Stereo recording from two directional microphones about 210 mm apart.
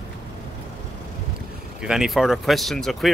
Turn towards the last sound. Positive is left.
turn(degrees=0)  # may be behind; listen again after turning